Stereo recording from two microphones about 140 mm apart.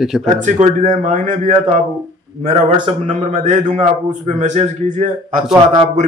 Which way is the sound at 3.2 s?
60° right (ahead or behind).